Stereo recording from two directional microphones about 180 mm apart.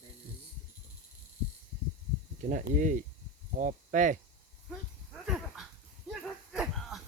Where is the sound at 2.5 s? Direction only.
45° right (ahead or behind).